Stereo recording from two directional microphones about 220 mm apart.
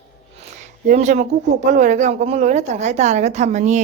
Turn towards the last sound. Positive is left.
turn(degrees=-30)  # may be behind; listen again after turning